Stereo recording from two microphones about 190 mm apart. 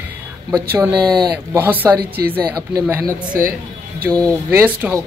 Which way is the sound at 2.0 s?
55° right (ahead or behind).